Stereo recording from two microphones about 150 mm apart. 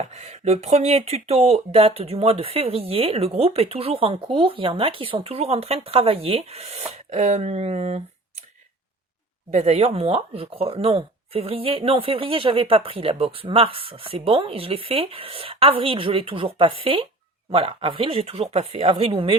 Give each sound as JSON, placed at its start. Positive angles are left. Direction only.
{"t": 0.0, "sound": "speech", "side_deg": -45}
{"t": 9.5, "sound": "speech", "side_deg": -45}